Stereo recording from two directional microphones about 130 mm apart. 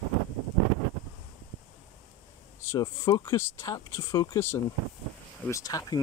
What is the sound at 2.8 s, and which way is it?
Speech, 30° left (ahead or behind).